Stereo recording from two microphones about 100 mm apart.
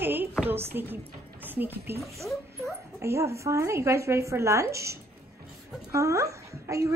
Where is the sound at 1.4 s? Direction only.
20° right (ahead or behind).